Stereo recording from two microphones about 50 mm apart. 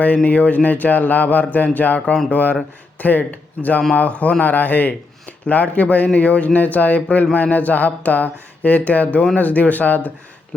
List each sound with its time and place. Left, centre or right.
0.0 s speech: left